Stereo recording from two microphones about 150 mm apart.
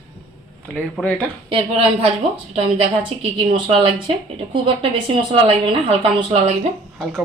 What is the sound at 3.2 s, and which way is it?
A woman's voice, 35° right (ahead or behind).